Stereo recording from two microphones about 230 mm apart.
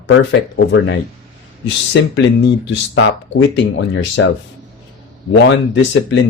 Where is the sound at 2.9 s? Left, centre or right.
Left.